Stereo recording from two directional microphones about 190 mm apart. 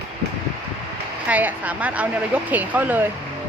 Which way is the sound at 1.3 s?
10° right (ahead or behind).